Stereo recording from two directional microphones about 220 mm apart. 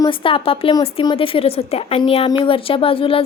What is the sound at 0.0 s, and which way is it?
Speech, 20° left (ahead or behind).